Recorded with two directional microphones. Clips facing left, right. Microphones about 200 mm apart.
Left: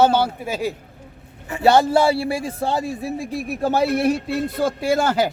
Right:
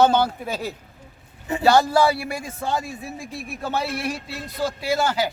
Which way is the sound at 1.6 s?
25° left (ahead or behind).